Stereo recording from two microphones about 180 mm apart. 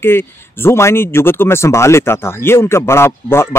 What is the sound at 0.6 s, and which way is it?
Speech, 15° left (ahead or behind).